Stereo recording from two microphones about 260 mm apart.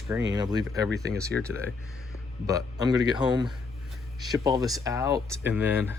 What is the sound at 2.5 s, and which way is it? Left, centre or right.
Speech, centre.